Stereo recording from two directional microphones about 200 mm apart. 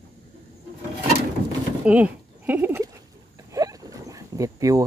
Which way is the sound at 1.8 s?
5° right (ahead or behind).